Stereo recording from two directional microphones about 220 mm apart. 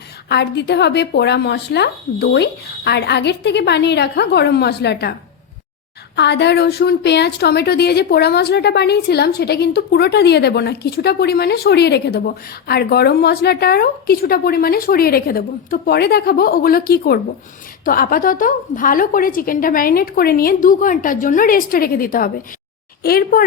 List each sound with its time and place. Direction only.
0.3 s a woman's voice: 50° left (ahead or behind)
6.1 s a woman's voice: 50° left (ahead or behind)